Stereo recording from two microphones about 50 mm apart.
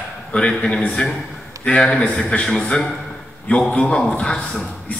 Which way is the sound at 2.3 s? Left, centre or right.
Centre.